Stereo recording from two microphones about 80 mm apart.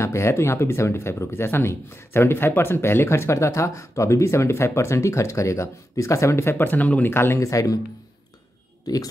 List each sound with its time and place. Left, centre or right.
0.0 s speech: left
6.6 s speech: left
8.9 s speech: left